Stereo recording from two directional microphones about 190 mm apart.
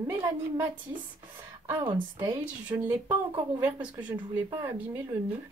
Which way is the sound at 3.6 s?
5° right (ahead or behind).